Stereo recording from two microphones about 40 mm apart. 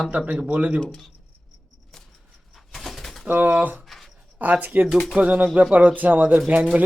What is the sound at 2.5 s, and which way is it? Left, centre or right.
Bird, centre.